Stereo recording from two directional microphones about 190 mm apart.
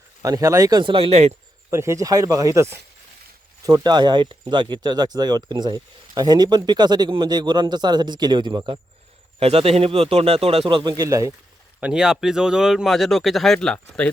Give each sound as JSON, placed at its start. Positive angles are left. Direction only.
{"t": 0.2, "sound": "speech", "side_deg": -20}
{"t": 1.7, "sound": "speech", "side_deg": -15}
{"t": 11.8, "sound": "speech", "side_deg": -5}